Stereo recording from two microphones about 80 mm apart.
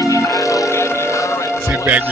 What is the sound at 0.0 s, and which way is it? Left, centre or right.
Music, left.